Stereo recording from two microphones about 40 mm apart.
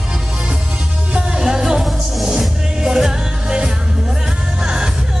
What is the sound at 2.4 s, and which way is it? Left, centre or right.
Music, centre.